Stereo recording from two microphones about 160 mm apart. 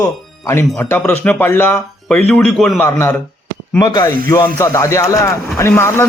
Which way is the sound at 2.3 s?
5° left (ahead or behind).